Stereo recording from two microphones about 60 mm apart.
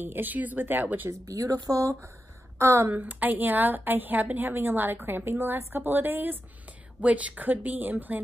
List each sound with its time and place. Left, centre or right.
0.0 s a woman's voice: right
1.2 s speech: right
2.6 s speech: right
2.9 s a woman's voice: right
7.0 s speech: right